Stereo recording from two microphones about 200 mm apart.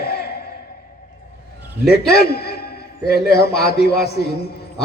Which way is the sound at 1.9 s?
50° left (ahead or behind).